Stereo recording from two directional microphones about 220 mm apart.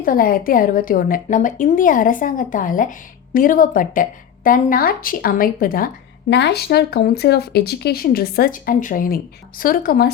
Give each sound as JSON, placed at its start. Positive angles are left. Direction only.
{"t": 0.0, "sound": "a woman's voice", "side_deg": 40}